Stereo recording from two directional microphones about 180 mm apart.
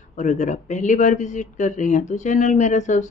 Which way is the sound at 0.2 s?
40° left (ahead or behind).